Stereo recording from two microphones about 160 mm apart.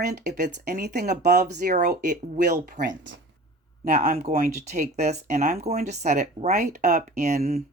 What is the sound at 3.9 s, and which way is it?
Speech, 65° right (ahead or behind).